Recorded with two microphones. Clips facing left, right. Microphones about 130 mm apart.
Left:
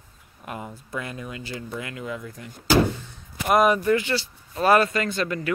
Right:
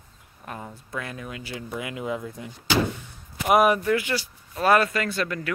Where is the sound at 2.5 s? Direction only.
50° left (ahead or behind).